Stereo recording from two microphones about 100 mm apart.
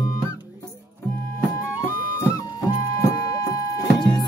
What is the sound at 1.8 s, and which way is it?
Music, 30° left (ahead or behind).